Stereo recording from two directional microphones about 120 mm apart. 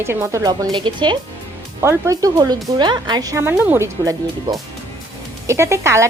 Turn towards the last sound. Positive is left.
turn(degrees=-25)  # may be behind; listen again after turning